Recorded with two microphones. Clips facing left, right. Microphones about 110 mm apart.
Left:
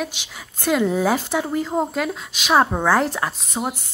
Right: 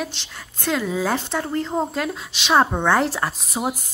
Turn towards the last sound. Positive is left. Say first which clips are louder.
# even
turn(degrees=0)  # may be behind; listen again after turning